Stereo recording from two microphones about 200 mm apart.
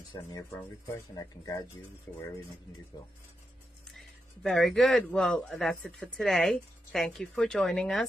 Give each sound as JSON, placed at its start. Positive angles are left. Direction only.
{"t": 0.9, "sound": "speech", "side_deg": 20}
{"t": 3.9, "sound": "a man's voice", "side_deg": 0}